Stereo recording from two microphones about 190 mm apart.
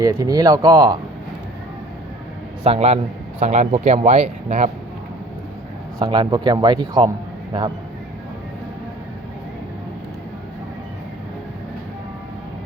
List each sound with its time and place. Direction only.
0.0 s speech: 20° right (ahead or behind)
2.6 s speech: 30° right (ahead or behind)
6.0 s speech: 25° right (ahead or behind)